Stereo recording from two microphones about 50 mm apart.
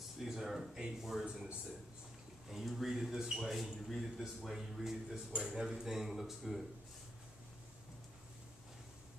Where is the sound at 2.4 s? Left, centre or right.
Centre.